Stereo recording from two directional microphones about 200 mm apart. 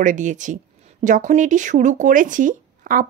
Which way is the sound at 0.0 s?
40° right (ahead or behind).